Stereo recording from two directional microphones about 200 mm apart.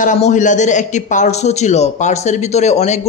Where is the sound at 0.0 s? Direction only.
40° left (ahead or behind).